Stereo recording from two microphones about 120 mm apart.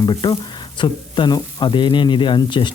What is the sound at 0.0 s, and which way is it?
Speech, 35° left (ahead or behind).